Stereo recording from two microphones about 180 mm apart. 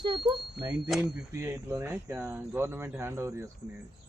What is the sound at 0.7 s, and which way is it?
Speech, centre (ahead or behind).